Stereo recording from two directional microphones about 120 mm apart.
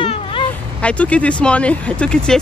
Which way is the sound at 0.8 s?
10° left (ahead or behind).